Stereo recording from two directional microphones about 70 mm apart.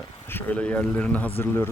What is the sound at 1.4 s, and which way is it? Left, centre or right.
Speech, left.